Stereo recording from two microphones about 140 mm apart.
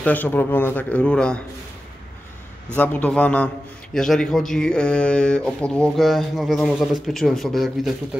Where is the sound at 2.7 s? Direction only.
10° left (ahead or behind).